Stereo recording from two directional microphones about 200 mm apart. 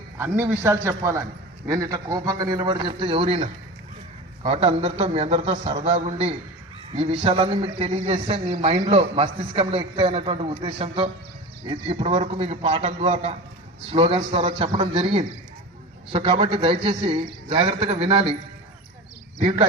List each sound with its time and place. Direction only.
0.2 s a man's voice: 10° right (ahead or behind); by 18.3 s 30° right (ahead or behind)